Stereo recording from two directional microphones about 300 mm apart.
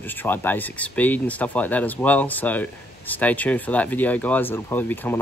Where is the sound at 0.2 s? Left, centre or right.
Centre.